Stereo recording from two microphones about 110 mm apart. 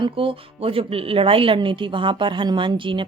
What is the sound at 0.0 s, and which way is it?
A woman's voice, 55° right (ahead or behind).